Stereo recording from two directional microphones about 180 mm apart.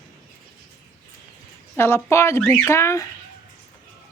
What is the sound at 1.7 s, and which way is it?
Speech, 15° left (ahead or behind).